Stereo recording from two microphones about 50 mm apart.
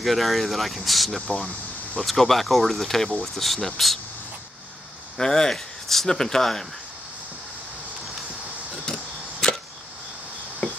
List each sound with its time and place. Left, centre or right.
0.0 s speech: centre
1.2 s speech: left
2.0 s speech: centre
5.1 s speech: centre
10.6 s a sound: left